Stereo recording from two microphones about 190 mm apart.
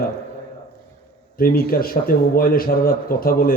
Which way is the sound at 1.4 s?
50° left (ahead or behind).